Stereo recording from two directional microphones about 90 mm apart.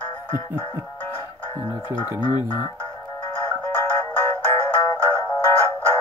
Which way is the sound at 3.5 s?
20° left (ahead or behind).